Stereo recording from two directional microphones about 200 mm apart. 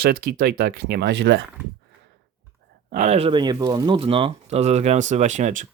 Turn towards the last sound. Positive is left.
turn(degrees=-35)  # may be behind; listen again after turning